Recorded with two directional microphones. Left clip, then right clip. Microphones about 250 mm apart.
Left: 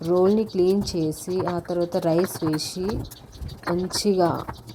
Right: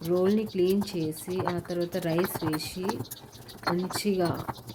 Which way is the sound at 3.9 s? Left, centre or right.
Centre.